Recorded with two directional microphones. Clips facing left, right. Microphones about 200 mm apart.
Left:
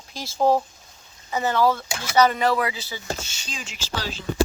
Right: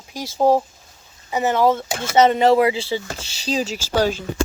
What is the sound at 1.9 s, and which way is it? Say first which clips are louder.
Speech: right 6 dB; 50° right (ahead or behind).